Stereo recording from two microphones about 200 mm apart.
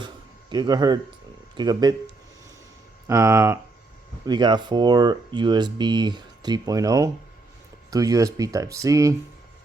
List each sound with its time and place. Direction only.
0.5 s speech: 20° right (ahead or behind)
3.1 s speech: 15° right (ahead or behind)